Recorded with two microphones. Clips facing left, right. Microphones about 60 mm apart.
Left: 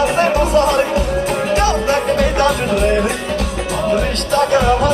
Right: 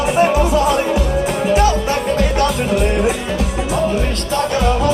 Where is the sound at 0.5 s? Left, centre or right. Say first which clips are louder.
Left 1 dB; left.